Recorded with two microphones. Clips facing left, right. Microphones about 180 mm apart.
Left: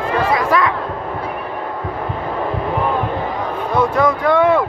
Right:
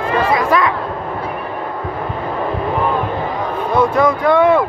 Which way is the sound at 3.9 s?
15° right (ahead or behind).